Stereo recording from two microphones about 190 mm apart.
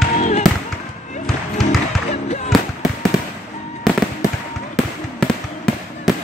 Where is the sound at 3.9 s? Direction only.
Centre (ahead or behind).